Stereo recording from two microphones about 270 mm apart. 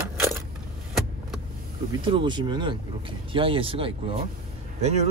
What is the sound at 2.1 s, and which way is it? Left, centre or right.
Speech, centre.